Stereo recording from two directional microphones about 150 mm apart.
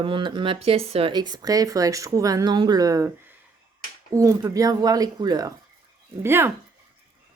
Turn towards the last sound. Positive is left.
turn(degrees=-15)  # may be behind; listen again after turning